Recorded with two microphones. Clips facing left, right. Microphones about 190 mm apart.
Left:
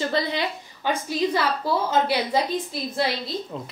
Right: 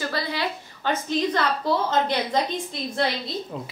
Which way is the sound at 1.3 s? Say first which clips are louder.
Even; 10° left (ahead or behind).